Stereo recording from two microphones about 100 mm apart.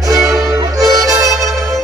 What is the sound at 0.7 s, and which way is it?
Music, 35° right (ahead or behind).